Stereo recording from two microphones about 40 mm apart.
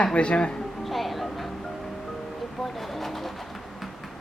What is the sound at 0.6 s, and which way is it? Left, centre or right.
Music, centre.